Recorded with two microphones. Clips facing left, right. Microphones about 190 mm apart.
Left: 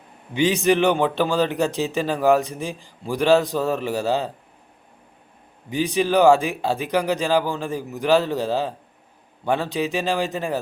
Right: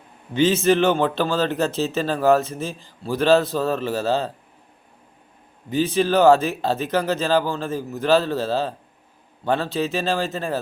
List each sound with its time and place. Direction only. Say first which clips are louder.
0.3 s a man's voice: right 1 dB; 15° left (ahead or behind)
5.7 s a man's voice: right 1 dB; 15° left (ahead or behind)